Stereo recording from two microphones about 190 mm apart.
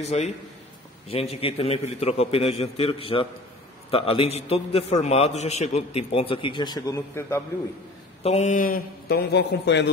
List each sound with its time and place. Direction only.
0.0 s a man's voice: 35° left (ahead or behind); by 7.4 s 15° left (ahead or behind)
8.2 s a man's voice: 35° left (ahead or behind); by 9.8 s 65° left (ahead or behind)